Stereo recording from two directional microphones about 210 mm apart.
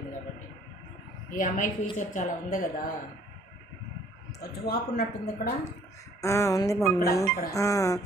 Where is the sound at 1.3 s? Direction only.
40° left (ahead or behind).